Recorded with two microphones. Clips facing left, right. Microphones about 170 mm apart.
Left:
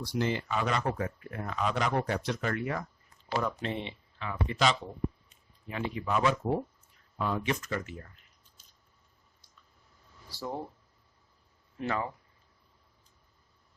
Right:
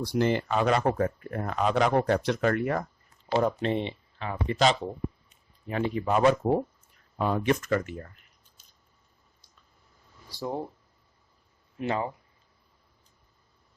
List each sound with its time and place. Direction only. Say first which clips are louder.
0.0 s speech: right 6 dB; 50° right (ahead or behind)
0.8 s speech: right 6 dB; 45° right (ahead or behind)
3.6 s speech: right 7 dB; 30° right (ahead or behind); by 8.1 s 50° right (ahead or behind)
10.2 s speech: right 4 dB; 15° right (ahead or behind)
11.9 s speech: right 4 dB; 25° right (ahead or behind)